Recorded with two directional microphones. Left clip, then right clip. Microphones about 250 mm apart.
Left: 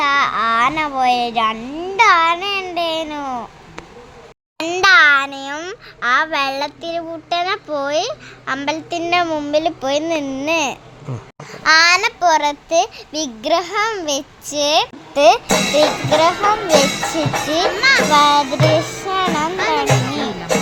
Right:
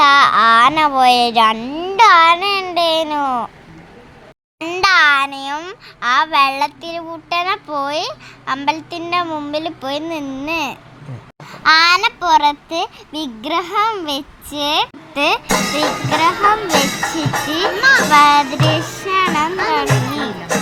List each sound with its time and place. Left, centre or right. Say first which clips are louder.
0.0 s a child's voice: right 6 dB; centre
4.6 s a child's voice: left 1 dB; centre
17.8 s a child's voice: right 3 dB; centre
18.1 s music: right 2 dB; centre